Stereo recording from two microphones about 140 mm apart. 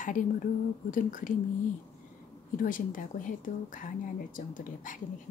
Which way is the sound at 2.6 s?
75° left (ahead or behind).